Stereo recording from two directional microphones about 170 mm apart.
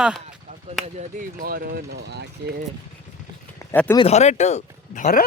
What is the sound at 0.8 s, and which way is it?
Speech, 40° right (ahead or behind).